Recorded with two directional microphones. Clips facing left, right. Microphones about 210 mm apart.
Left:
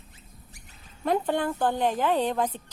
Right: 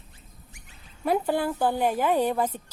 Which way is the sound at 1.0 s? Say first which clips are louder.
Right 1 dB; 10° right (ahead or behind).